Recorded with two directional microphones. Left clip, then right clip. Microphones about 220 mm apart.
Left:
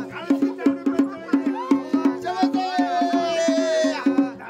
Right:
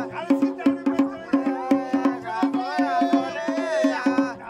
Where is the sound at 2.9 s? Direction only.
50° left (ahead or behind).